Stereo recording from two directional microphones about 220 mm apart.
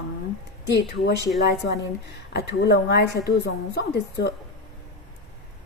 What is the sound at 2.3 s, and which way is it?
A woman's voice, 50° left (ahead or behind).